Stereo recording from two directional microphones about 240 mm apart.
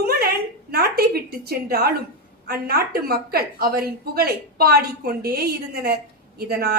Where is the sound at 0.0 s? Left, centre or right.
Right.